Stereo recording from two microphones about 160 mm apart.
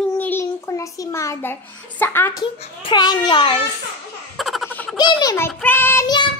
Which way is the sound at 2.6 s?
30° left (ahead or behind).